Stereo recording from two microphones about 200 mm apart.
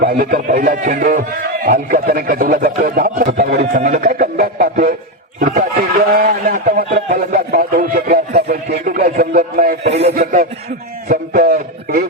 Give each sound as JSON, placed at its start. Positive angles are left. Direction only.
{"t": 0.0, "sound": "speech", "side_deg": -45}
{"t": 6.9, "sound": "a sound", "side_deg": -40}
{"t": 8.8, "sound": "speech", "side_deg": -45}
{"t": 9.8, "sound": "speech", "side_deg": -30}
{"t": 10.1, "sound": "speech", "side_deg": -40}